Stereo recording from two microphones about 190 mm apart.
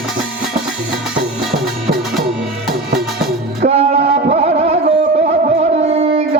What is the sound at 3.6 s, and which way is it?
Music, 35° right (ahead or behind).